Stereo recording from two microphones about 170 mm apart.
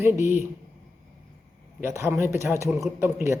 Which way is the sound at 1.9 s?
15° right (ahead or behind).